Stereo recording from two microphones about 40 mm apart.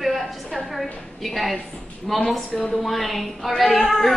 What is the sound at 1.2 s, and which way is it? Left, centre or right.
A woman's voice, centre.